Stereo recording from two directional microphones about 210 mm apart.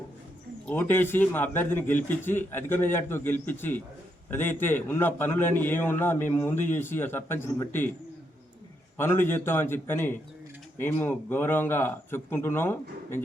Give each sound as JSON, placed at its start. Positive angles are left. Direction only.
{"t": 0.6, "sound": "a man's voice", "side_deg": 10}
{"t": 9.0, "sound": "a man's voice", "side_deg": 10}